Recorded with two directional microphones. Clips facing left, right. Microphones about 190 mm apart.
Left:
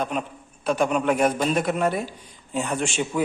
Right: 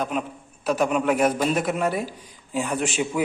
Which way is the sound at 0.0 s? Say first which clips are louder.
Even; 5° right (ahead or behind).